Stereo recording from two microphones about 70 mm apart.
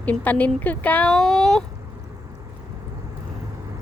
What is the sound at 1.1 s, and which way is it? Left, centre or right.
Speech, centre.